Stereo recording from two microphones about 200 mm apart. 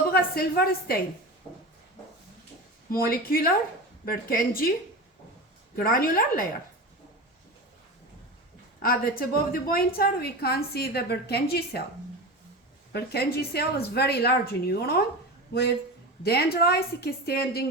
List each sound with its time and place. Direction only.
0.1 s a woman's voice: 50° left (ahead or behind)
2.9 s a woman's voice: 45° left (ahead or behind)
5.7 s a woman's voice: 45° left (ahead or behind)
8.8 s a woman's voice: 45° left (ahead or behind)
12.9 s a woman's voice: 55° left (ahead or behind)
16.2 s a woman's voice: 55° left (ahead or behind)